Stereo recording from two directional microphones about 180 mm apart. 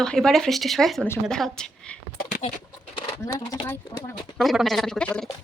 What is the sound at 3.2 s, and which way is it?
Speech, 15° left (ahead or behind).